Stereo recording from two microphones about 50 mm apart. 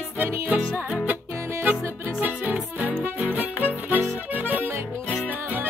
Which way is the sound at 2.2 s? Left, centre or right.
Right.